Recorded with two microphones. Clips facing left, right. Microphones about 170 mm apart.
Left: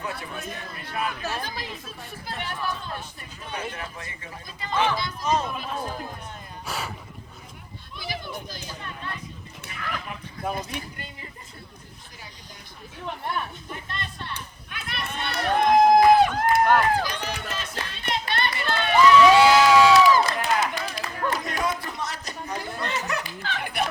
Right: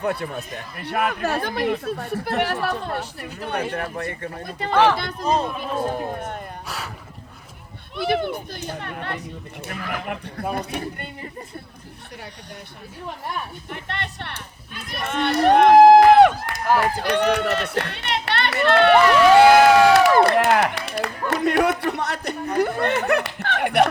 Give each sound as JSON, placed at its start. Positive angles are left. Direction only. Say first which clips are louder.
{"t": 0.0, "sound": "speech", "louder": "right 8 dB", "side_deg": -60}
{"t": 5.2, "sound": "a man's voice", "louder": "right 3 dB", "side_deg": -35}
{"t": 5.9, "sound": "speech", "louder": "right 8 dB", "side_deg": -60}
{"t": 6.7, "sound": "a sound", "louder": "left 4 dB", "side_deg": 0}
{"t": 7.9, "sound": "speech", "louder": "right 12 dB", "side_deg": -65}
{"t": 13.7, "sound": "a woman's voice", "louder": "right 4 dB", "side_deg": -70}
{"t": 15.0, "sound": "run", "louder": "right 10 dB", "side_deg": -75}
{"t": 16.8, "sound": "speech", "louder": "right 5 dB", "side_deg": -70}